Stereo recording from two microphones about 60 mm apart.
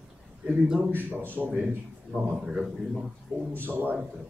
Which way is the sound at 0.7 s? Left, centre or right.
Right.